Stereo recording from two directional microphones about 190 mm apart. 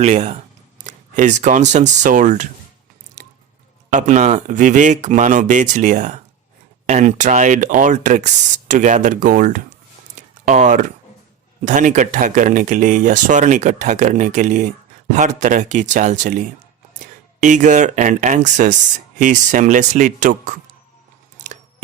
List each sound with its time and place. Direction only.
0.0 s speech: 35° right (ahead or behind)
3.8 s speech: 40° right (ahead or behind)
21.3 s a sound: 40° right (ahead or behind)